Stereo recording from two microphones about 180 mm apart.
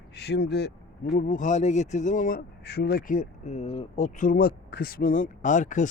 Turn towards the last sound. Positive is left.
turn(degrees=45)  # may be behind; listen again after turning